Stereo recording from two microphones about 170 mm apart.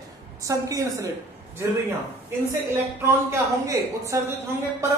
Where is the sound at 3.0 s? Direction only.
15° right (ahead or behind).